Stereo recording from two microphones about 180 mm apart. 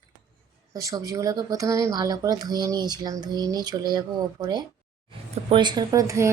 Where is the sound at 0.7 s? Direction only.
20° right (ahead or behind).